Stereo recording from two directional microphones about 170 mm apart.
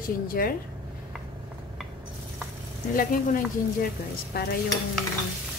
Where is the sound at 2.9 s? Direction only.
55° left (ahead or behind).